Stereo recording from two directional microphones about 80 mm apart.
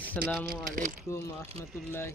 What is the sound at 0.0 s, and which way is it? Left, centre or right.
Speech, left.